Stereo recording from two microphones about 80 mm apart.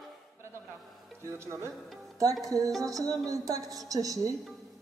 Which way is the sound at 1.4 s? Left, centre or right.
Right.